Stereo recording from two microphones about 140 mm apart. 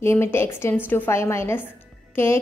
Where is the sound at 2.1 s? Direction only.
20° left (ahead or behind).